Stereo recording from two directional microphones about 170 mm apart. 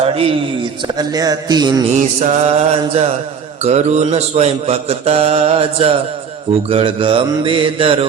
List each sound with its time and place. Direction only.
0.0 s speech: 35° right (ahead or behind)
2.0 s a man's voice: 45° right (ahead or behind)